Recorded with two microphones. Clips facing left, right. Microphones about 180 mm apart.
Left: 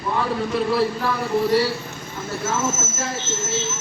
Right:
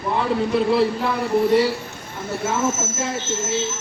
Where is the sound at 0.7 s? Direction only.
25° right (ahead or behind).